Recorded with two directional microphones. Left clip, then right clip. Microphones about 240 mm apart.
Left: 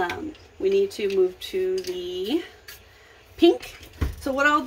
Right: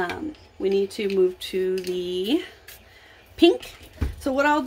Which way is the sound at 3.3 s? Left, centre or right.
Right.